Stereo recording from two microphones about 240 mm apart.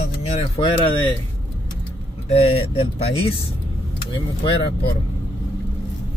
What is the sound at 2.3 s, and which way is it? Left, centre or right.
Speech, left.